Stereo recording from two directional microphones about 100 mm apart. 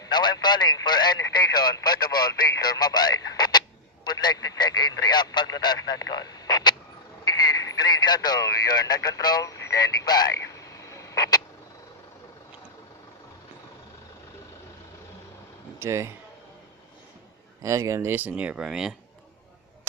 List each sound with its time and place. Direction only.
0.1 s speech: 45° left (ahead or behind)
7.2 s radio: 40° left (ahead or behind)
15.8 s a man's voice: 25° right (ahead or behind)
17.6 s speech: 30° right (ahead or behind); by 18.9 s 5° right (ahead or behind)